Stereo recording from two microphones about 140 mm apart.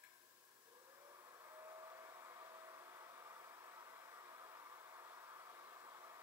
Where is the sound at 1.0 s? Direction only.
25° right (ahead or behind).